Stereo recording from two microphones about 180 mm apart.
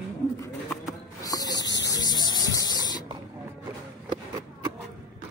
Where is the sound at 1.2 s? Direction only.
20° left (ahead or behind).